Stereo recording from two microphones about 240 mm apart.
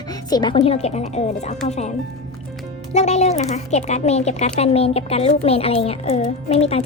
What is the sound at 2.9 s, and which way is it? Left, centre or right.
Speech, left.